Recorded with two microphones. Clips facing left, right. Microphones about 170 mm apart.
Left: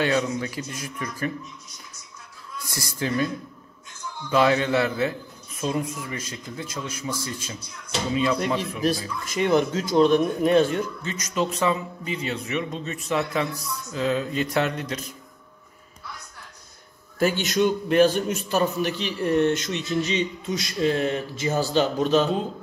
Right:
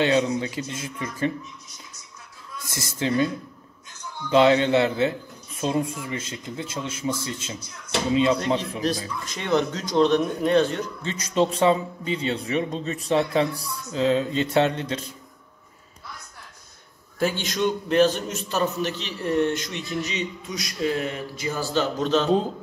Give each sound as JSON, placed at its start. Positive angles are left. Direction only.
{"t": 0.0, "sound": "a man's voice", "side_deg": -20}
{"t": 2.7, "sound": "a man's voice", "side_deg": -25}
{"t": 4.3, "sound": "a man's voice", "side_deg": -25}
{"t": 9.3, "sound": "a man's voice", "side_deg": 5}
{"t": 11.0, "sound": "a man's voice", "side_deg": -30}
{"t": 17.2, "sound": "a man's voice", "side_deg": 5}